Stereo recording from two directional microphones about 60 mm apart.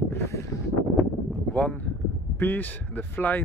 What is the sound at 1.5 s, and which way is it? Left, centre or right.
Speech, left.